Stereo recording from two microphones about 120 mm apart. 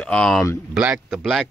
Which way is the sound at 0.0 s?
5° left (ahead or behind).